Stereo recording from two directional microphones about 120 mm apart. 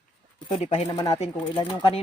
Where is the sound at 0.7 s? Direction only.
55° left (ahead or behind).